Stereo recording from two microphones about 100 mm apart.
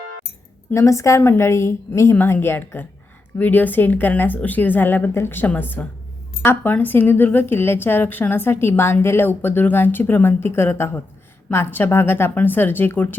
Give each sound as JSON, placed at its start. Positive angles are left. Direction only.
{"t": 0.7, "sound": "a woman's voice", "side_deg": 30}